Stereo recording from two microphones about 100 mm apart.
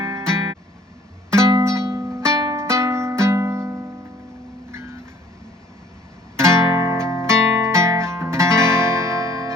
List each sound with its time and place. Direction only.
0.0 s music: 30° right (ahead or behind)
6.3 s music: 30° right (ahead or behind)